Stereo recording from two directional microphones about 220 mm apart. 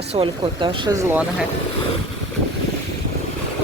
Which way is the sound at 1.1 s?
5° right (ahead or behind).